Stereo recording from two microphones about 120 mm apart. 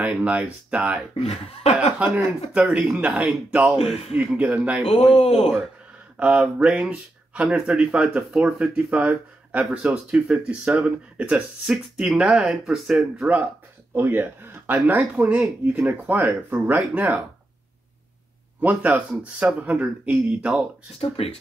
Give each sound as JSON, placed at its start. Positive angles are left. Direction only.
{"t": 0.0, "sound": "speech", "side_deg": -10}
{"t": 1.2, "sound": "speech", "side_deg": 60}
{"t": 2.5, "sound": "speech", "side_deg": -5}
{"t": 3.7, "sound": "speech", "side_deg": 55}
{"t": 4.2, "sound": "speech", "side_deg": -10}
{"t": 6.1, "sound": "speech", "side_deg": -10}
{"t": 18.6, "sound": "speech", "side_deg": -10}
{"t": 21.0, "sound": "speech", "side_deg": 50}